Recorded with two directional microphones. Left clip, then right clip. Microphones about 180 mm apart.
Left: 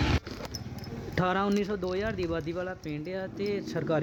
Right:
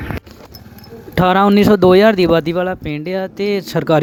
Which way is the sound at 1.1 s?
55° right (ahead or behind).